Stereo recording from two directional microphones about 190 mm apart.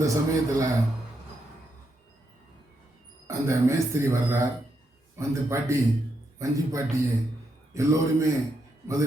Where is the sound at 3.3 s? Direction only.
15° right (ahead or behind).